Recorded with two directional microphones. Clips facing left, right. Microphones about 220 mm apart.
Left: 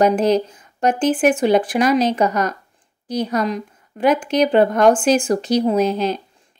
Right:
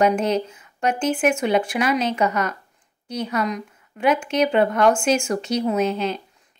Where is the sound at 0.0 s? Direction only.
35° left (ahead or behind).